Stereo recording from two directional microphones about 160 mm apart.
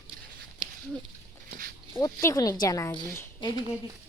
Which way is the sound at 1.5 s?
60° right (ahead or behind).